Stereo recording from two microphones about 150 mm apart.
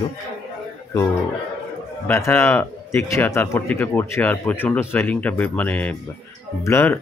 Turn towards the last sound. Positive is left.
turn(degrees=15)  # may be behind; listen again after turning